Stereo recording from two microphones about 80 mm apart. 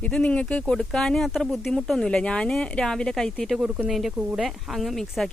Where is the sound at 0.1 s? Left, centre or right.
Centre.